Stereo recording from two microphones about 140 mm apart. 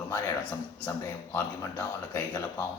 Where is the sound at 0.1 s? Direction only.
15° left (ahead or behind).